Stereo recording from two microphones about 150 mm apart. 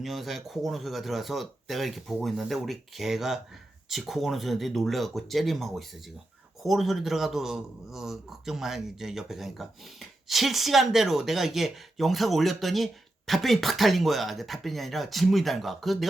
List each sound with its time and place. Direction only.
0.0 s speech: centre (ahead or behind)